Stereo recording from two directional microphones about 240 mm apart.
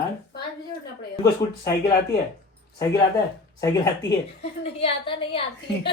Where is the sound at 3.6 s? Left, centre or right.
Centre.